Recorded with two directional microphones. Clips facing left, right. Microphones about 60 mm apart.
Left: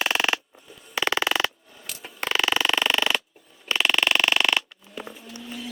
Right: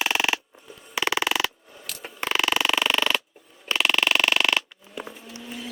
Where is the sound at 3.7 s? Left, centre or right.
Centre.